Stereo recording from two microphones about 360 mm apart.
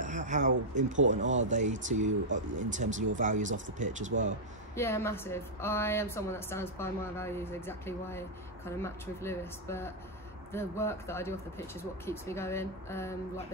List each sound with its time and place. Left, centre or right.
0.0 s speech: centre
4.7 s a woman's voice: centre